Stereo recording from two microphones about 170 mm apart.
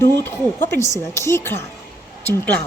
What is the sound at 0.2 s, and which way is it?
Speech, 10° left (ahead or behind).